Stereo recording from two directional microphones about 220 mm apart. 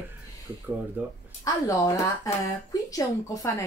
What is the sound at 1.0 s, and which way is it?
Speech, 5° right (ahead or behind).